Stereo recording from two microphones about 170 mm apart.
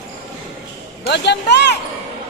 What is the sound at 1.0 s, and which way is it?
Speech, 85° left.